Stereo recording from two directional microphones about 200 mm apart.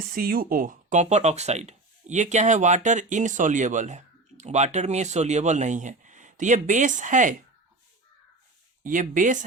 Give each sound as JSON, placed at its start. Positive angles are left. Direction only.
{"t": 0.1, "sound": "speech", "side_deg": -45}
{"t": 8.8, "sound": "speech", "side_deg": -40}